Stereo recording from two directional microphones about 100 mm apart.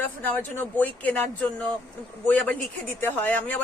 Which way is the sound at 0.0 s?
20° left (ahead or behind).